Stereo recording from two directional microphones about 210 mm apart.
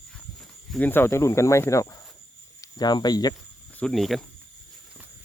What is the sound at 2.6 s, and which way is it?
Speech, 20° left (ahead or behind).